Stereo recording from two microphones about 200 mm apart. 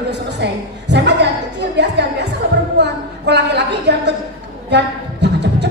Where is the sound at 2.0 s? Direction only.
60° right (ahead or behind).